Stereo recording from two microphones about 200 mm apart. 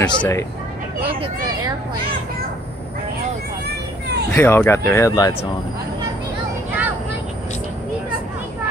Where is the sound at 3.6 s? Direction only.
55° right (ahead or behind).